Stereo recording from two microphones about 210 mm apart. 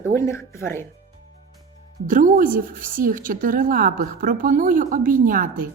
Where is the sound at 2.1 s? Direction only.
40° right (ahead or behind).